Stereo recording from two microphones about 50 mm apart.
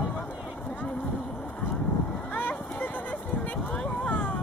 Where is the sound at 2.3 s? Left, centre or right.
Left.